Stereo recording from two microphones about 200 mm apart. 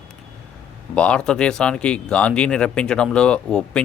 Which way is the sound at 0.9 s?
5° left (ahead or behind).